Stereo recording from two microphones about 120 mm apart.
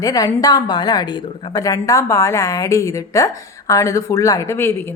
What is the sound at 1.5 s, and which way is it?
A woman's voice, 30° left (ahead or behind).